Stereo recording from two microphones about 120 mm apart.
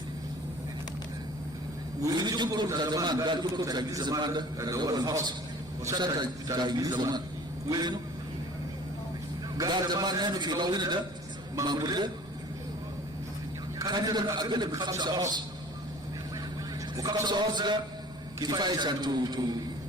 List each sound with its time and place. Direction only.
2.0 s a man's voice: 30° right (ahead or behind)
9.6 s a man's voice: 35° right (ahead or behind)
13.7 s a man's voice: 35° right (ahead or behind)
17.2 s a man's voice: 40° right (ahead or behind)